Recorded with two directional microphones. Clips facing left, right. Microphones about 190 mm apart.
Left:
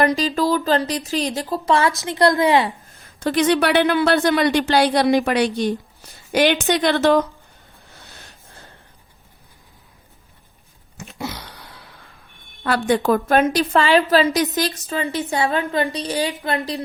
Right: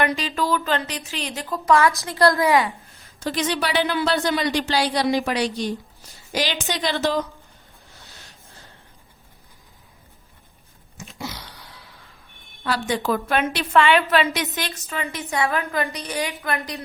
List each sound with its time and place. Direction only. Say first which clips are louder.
0.0 s a woman's voice: left 5 dB; 35° left (ahead or behind)
3.2 s speech: left 7 dB; 60° left (ahead or behind)
10.9 s a sound: left 4 dB; 60° left (ahead or behind)
12.6 s a woman's voice: left 5 dB; 55° left (ahead or behind); by 16.8 s 30° left (ahead or behind)